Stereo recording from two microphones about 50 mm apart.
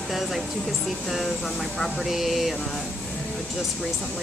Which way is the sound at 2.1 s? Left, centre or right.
Centre.